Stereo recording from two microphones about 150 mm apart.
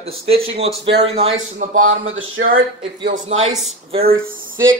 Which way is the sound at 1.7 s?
60° right (ahead or behind).